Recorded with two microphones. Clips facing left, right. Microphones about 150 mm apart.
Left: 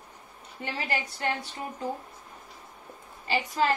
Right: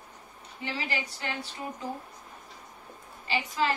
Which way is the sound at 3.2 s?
45° left (ahead or behind).